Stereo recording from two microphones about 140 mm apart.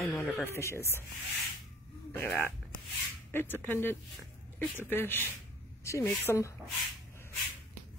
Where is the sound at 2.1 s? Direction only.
15° left (ahead or behind).